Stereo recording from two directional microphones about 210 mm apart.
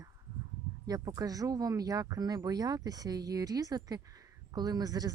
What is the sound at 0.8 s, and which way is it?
Speech, 15° right (ahead or behind).